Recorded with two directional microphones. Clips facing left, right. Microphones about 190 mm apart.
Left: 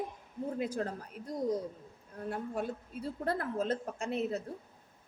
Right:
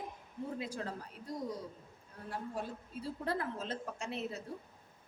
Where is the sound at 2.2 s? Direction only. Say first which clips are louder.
Left 5 dB; 55° left (ahead or behind).